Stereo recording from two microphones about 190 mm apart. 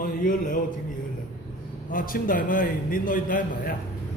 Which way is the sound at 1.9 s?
50° left (ahead or behind).